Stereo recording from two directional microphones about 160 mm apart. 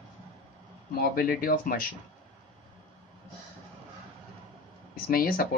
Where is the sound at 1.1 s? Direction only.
65° left (ahead or behind).